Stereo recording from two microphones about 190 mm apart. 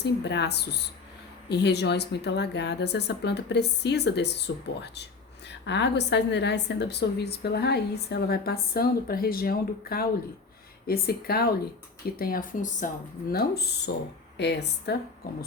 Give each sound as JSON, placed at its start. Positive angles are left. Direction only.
{"t": 0.0, "sound": "a woman's voice", "side_deg": 65}
{"t": 13.3, "sound": "a woman's voice", "side_deg": 55}